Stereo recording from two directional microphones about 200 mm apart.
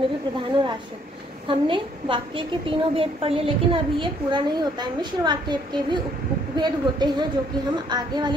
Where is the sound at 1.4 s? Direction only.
25° right (ahead or behind).